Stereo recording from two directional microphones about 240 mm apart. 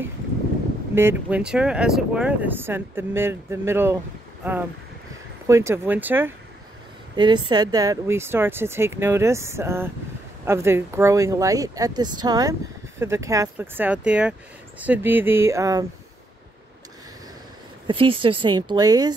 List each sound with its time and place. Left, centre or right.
0.9 s speech: centre
5.5 s speech: centre
7.2 s speech: centre
17.8 s speech: right